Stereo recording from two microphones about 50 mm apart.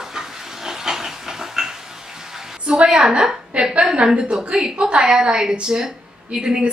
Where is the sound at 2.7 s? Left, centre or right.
Centre.